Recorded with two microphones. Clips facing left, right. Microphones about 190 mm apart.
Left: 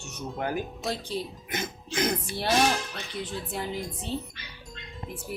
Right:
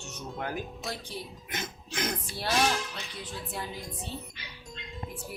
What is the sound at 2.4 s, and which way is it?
Speech, 25° left (ahead or behind).